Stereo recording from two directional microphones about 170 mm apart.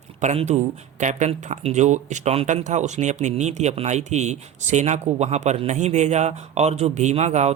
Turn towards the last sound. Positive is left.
turn(degrees=-40)  # may be behind; listen again after turning